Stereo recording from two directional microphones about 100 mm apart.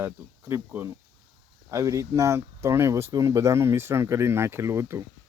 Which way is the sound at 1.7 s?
35° right (ahead or behind).